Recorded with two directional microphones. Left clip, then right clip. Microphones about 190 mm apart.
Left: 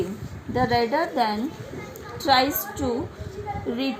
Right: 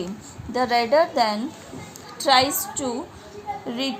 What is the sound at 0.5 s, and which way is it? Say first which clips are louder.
A woman's voice: right 3 dB; 45° right (ahead or behind).